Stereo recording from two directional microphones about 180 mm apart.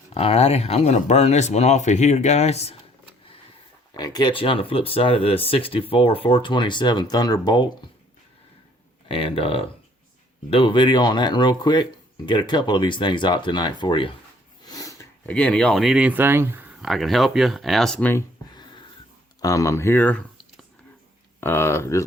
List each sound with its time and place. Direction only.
0.1 s speech: 35° left (ahead or behind)
3.9 s speech: 20° left (ahead or behind)
9.0 s speech: 30° left (ahead or behind)
14.7 s a sound: 20° left (ahead or behind)
15.3 s speech: 5° left (ahead or behind)
18.1 s a sound: 25° left (ahead or behind)
19.4 s speech: 20° left (ahead or behind)